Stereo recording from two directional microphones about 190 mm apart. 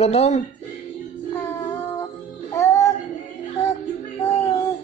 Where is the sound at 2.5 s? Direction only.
15° left (ahead or behind).